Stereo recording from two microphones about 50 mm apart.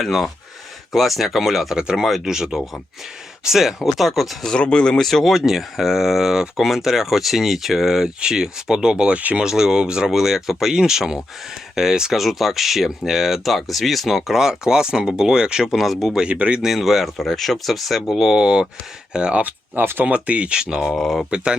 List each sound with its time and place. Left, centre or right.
0.0 s speech: centre
1.7 s speech: centre
4.4 s speech: centre; by 9.4 s right
9.4 s speech: centre
15.7 s speech: centre
16.2 s speech: right
16.6 s speech: centre
18.1 s speech: centre
19.4 s speech: right
19.8 s speech: right
20.1 s speech: right
20.8 s speech: centre
21.2 s speech: centre